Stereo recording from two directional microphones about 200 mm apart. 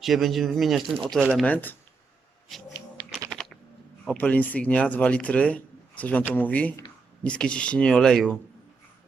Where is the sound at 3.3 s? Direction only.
Centre (ahead or behind).